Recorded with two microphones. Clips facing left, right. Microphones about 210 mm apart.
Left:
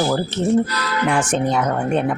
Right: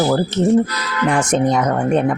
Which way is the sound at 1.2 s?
40° right (ahead or behind).